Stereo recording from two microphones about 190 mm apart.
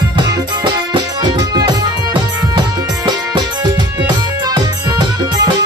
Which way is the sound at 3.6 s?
20° right (ahead or behind).